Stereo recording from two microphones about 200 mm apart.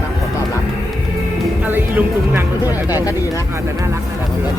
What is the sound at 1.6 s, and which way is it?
Speech, 10° right (ahead or behind).